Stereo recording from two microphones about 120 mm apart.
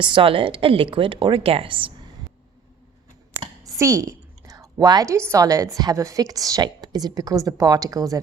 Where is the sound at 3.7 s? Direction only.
25° right (ahead or behind).